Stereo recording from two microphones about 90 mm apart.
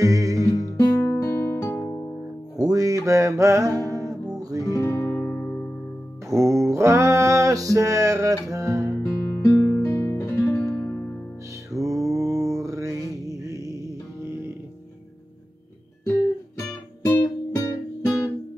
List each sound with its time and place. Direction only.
0.0 s music: 40° right (ahead or behind)
0.6 s music: 30° left (ahead or behind)
2.6 s music: 40° right (ahead or behind)
4.6 s guitar: 35° left (ahead or behind)
6.3 s a sound: 35° right (ahead or behind)
9.0 s music: 35° left (ahead or behind)
11.7 s music: 40° right (ahead or behind)
12.2 s mantra: 40° right (ahead or behind)
16.1 s music: 35° left (ahead or behind)